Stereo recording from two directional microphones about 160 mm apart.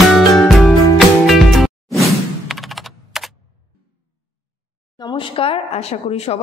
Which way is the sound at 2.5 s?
Centre (ahead or behind).